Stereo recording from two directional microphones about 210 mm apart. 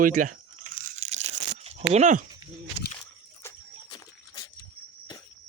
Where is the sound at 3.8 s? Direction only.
25° left (ahead or behind).